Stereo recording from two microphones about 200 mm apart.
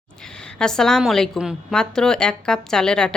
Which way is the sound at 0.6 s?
5° left (ahead or behind).